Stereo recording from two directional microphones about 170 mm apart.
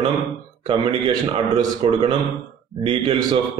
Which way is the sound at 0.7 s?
30° right (ahead or behind).